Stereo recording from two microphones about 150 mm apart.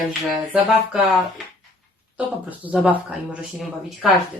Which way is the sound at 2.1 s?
10° right (ahead or behind).